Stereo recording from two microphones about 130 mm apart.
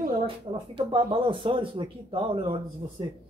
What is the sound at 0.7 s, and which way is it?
Speech, 40° right (ahead or behind).